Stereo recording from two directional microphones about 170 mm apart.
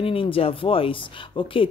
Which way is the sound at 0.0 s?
35° left (ahead or behind).